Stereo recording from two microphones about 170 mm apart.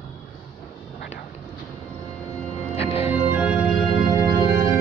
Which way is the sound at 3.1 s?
10° right (ahead or behind).